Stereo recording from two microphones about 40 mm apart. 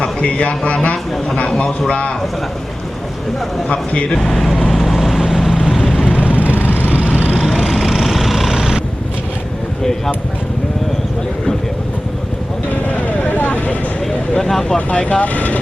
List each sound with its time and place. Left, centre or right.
0.0 s a man's voice: left
3.7 s a man's voice: left
4.2 s speech: centre
4.7 s vehicle: centre
6.1 s vehicle: right
7.1 s vehicle: left
7.7 s vehicle: centre
13.1 s vehicle: left
14.3 s speech: centre
14.9 s a man's voice: left
15.2 s speech: left